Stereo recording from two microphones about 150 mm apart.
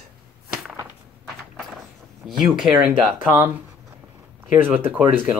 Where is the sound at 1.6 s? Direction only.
Centre (ahead or behind).